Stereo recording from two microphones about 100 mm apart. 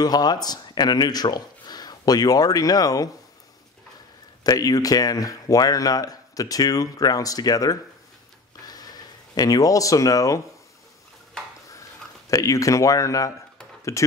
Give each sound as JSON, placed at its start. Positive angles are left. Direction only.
{"t": 0.0, "sound": "speech", "side_deg": 40}
{"t": 4.4, "sound": "speech", "side_deg": 40}
{"t": 8.6, "sound": "a sound", "side_deg": 40}
{"t": 12.3, "sound": "speech", "side_deg": 35}